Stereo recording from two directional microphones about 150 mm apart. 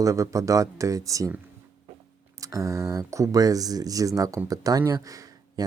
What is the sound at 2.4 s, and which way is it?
Speech, 20° right (ahead or behind).